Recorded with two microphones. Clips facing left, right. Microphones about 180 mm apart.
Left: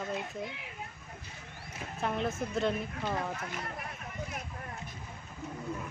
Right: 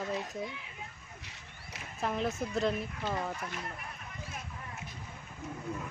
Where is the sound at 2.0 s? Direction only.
Centre (ahead or behind).